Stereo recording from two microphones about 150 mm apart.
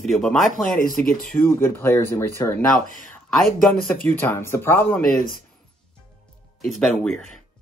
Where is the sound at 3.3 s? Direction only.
Centre (ahead or behind).